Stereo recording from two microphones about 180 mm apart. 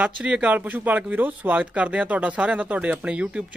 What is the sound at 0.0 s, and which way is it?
Speech, 5° right (ahead or behind).